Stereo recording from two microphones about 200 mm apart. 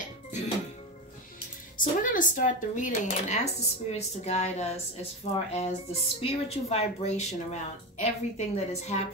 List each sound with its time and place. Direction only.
1.8 s speech: 40° left (ahead or behind)